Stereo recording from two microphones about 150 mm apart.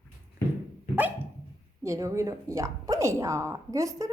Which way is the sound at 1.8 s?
20° right (ahead or behind).